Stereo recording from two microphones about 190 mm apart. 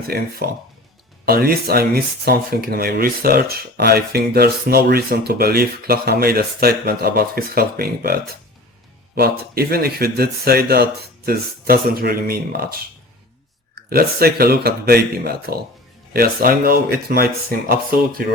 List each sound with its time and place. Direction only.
0.1 s speech: 55° right (ahead or behind)
13.9 s speech: 55° right (ahead or behind)